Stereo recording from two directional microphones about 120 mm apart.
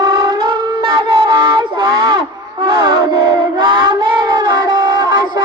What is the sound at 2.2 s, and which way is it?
Music, 40° right (ahead or behind).